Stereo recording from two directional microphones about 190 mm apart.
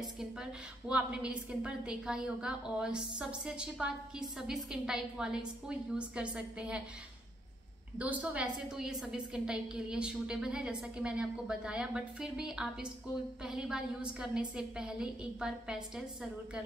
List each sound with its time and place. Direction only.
0.2 s a woman's voice: 5° right (ahead or behind)
8.0 s a woman's voice: 10° right (ahead or behind)